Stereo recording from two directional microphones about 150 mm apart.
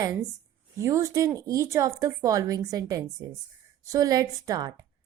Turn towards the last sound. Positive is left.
turn(degrees=-25)  # may be behind; listen again after turning